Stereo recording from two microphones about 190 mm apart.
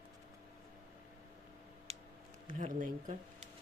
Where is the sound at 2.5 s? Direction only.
45° right (ahead or behind).